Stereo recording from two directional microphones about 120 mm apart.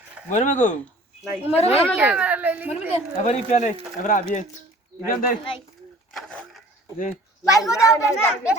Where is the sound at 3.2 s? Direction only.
90° left.